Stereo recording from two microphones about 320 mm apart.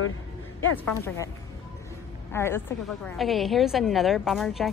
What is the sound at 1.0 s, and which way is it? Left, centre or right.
Speech, centre.